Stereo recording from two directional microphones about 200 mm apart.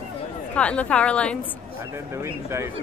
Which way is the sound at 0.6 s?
5° left (ahead or behind).